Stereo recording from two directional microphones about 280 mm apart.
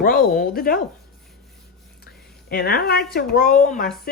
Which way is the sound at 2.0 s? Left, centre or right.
Left.